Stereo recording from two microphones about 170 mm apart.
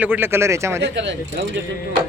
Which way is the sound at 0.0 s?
10° right (ahead or behind).